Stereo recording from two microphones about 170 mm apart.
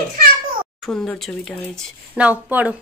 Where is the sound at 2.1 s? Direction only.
10° right (ahead or behind).